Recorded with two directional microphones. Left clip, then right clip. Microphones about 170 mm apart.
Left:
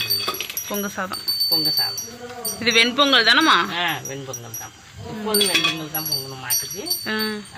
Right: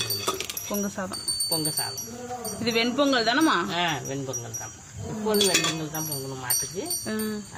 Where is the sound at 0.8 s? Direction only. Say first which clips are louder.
Left 6 dB; 5° left (ahead or behind).